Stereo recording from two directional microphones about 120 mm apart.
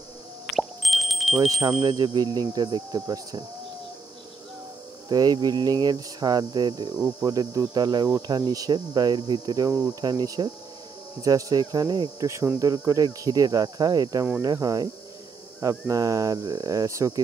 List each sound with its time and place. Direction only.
0.5 s plop: centre (ahead or behind)
1.8 s speech: 35° right (ahead or behind)
5.1 s speech: 35° right (ahead or behind)
12.3 s speech: 25° right (ahead or behind)